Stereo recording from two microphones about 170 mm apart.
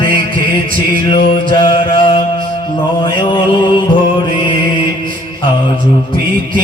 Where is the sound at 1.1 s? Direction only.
25° left (ahead or behind).